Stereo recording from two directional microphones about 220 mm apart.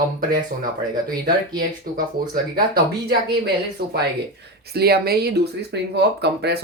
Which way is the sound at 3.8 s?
45° right (ahead or behind).